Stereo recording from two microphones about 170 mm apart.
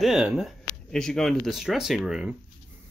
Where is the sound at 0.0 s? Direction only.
5° right (ahead or behind).